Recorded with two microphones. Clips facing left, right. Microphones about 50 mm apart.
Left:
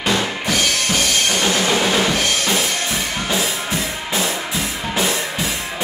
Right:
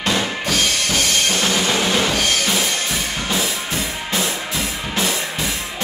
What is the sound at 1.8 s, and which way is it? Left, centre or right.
Drum kit, centre.